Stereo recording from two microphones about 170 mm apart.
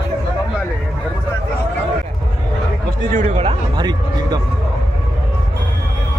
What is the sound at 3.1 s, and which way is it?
Speech, 50° right (ahead or behind).